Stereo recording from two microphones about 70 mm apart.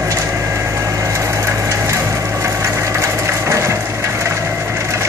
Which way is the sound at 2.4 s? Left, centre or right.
Right.